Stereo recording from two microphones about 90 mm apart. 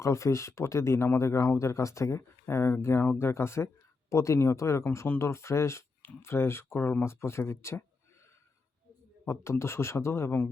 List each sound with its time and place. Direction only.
0.0 s speech: 35° left (ahead or behind)
9.2 s speech: 30° left (ahead or behind)